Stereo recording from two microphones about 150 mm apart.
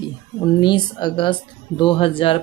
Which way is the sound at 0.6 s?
30° left (ahead or behind).